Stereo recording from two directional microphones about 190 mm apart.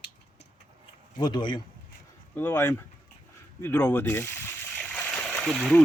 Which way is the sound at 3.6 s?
10° left (ahead or behind).